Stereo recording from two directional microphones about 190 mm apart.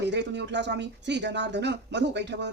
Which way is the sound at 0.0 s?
65° right (ahead or behind).